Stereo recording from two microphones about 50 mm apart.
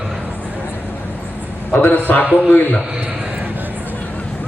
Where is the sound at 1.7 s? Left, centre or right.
Left.